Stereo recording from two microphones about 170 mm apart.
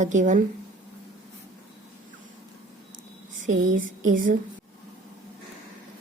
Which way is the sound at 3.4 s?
50° right (ahead or behind).